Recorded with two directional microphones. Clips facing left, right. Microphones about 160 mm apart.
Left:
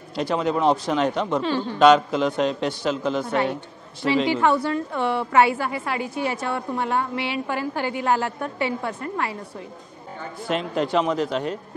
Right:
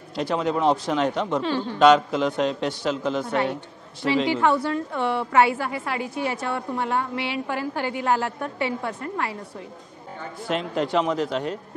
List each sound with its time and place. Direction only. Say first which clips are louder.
0.1 s a woman's voice: left 1 dB; 15° left (ahead or behind)
10.5 s a woman's voice: left 1 dB; 15° left (ahead or behind)